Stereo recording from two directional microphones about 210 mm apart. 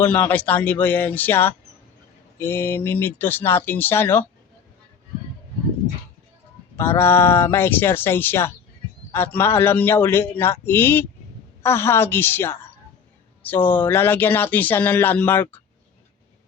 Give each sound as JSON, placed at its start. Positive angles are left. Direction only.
{"t": 0.0, "sound": "speech", "side_deg": 10}
{"t": 6.7, "sound": "speech", "side_deg": 10}
{"t": 13.7, "sound": "speech", "side_deg": 10}